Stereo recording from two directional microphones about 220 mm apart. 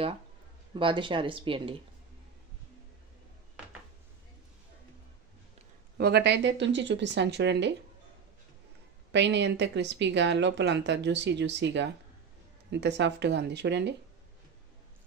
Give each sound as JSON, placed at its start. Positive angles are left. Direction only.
{"t": 0.7, "sound": "speech", "side_deg": -25}
{"t": 5.9, "sound": "speech", "side_deg": -45}
{"t": 9.1, "sound": "speech", "side_deg": -55}